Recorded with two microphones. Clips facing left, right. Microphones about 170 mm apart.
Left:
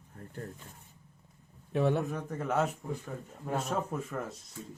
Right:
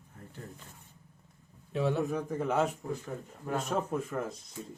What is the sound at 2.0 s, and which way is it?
Speech, centre (ahead or behind).